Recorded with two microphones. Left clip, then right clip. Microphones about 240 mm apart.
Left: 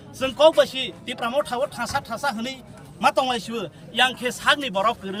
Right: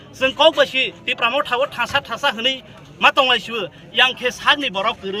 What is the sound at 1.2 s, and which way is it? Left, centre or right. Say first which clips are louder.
Speech: right 5 dB; right.